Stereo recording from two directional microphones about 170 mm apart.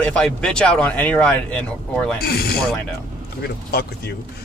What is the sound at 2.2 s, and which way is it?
Speech, 65° left (ahead or behind).